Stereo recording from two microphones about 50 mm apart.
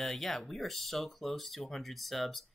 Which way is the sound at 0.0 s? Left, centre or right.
Centre.